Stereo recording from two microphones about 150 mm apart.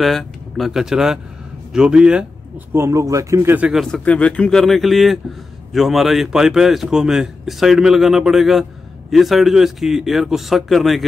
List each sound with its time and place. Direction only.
0.0 s speech: centre (ahead or behind)
2.7 s speech: 20° right (ahead or behind)
3.8 s a man's voice: 5° left (ahead or behind)